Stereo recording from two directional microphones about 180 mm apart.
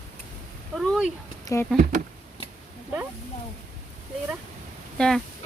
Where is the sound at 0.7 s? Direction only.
Centre (ahead or behind).